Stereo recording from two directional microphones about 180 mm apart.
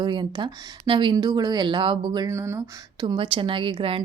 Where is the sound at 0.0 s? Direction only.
25° right (ahead or behind).